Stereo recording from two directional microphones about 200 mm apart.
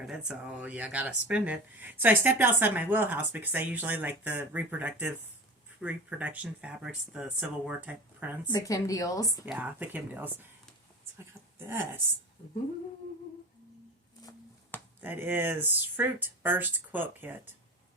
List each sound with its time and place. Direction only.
0.0 s speech: 5° right (ahead or behind)
8.5 s a woman's voice: 15° left (ahead or behind)
9.5 s speech: 10° right (ahead or behind)
11.6 s speech: 10° right (ahead or behind)
14.2 s a sound: 20° left (ahead or behind)
15.0 s speech: 10° right (ahead or behind)